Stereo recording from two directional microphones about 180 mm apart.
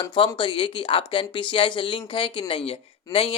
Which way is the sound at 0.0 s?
25° left (ahead or behind).